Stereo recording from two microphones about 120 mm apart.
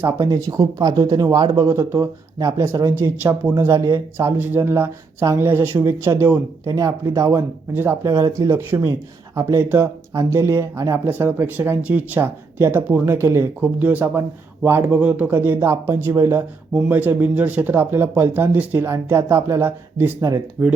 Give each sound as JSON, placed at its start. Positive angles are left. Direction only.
{"t": 0.0, "sound": "speech", "side_deg": -30}